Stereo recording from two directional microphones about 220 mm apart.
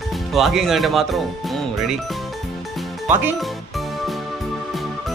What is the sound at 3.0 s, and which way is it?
Music, 5° right (ahead or behind).